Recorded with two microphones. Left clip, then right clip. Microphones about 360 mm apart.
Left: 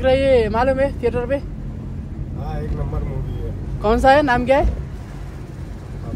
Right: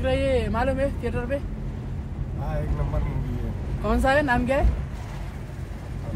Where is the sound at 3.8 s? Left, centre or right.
Left.